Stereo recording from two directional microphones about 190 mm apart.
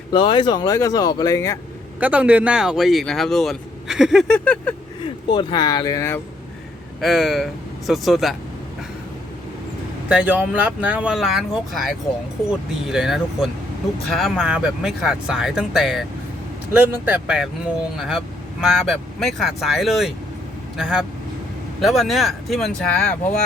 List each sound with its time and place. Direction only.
0.1 s speech: 25° left (ahead or behind)
2.0 s speech: 10° right (ahead or behind)
5.3 s speech: 25° left (ahead or behind)
7.0 s speech: centre (ahead or behind)
10.1 s speech: 5° right (ahead or behind)